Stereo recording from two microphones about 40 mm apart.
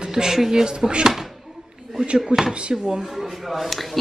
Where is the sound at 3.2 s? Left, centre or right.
Centre.